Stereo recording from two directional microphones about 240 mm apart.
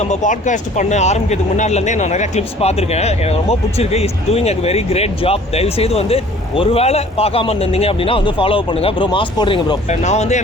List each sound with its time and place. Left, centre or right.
0.0 s speech: left